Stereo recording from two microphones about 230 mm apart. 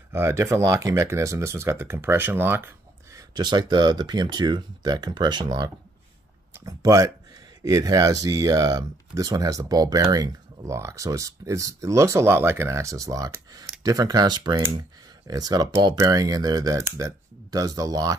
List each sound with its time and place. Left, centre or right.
0.1 s speech: centre